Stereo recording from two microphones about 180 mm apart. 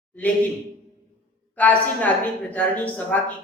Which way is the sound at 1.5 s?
10° left (ahead or behind).